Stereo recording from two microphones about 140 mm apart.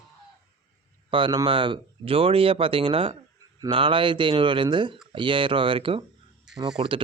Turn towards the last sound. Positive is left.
turn(degrees=-35)  # may be behind; listen again after turning